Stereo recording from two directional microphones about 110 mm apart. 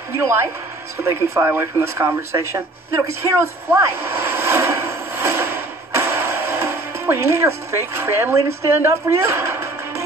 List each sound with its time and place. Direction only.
1.0 s speech: 25° right (ahead or behind)